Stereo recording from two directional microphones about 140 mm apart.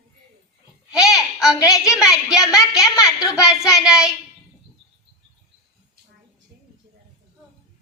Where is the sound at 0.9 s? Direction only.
5° right (ahead or behind).